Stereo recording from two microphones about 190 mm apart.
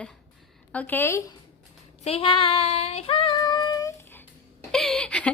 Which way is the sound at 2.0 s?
30° left (ahead or behind).